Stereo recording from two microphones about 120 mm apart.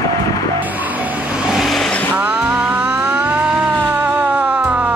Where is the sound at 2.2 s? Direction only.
10° right (ahead or behind).